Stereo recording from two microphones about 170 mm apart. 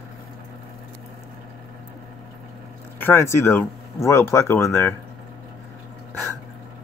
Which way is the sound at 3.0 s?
15° left (ahead or behind).